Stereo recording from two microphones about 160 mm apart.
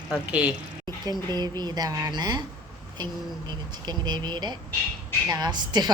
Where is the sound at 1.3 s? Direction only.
25° right (ahead or behind).